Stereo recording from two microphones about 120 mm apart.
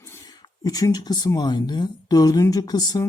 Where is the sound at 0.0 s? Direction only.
25° left (ahead or behind).